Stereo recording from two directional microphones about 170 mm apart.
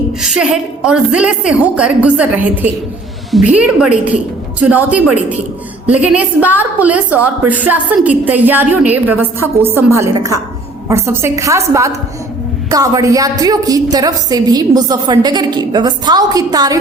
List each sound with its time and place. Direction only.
0.2 s a woman's voice: 5° right (ahead or behind); by 16.7 s 20° right (ahead or behind)